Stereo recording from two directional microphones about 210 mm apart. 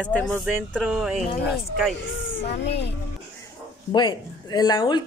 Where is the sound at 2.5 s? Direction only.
55° left (ahead or behind).